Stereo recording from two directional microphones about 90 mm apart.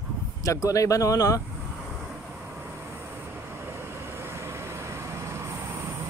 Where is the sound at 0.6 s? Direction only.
40° left (ahead or behind).